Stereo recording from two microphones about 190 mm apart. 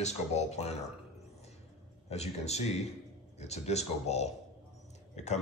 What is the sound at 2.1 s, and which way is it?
Speech, 35° left (ahead or behind).